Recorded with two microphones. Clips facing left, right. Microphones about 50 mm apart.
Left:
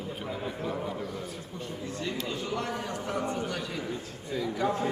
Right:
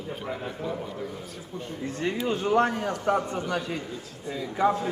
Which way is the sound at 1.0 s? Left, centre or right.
Centre.